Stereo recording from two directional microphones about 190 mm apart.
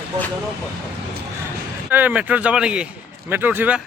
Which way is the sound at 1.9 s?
10° right (ahead or behind).